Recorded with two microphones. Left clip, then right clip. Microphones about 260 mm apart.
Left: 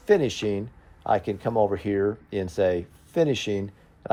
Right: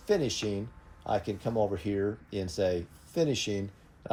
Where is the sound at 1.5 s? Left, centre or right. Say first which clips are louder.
Left 7 dB; left.